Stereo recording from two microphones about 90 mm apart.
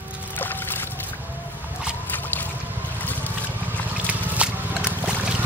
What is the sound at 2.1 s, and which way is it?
Boat, 20° left (ahead or behind).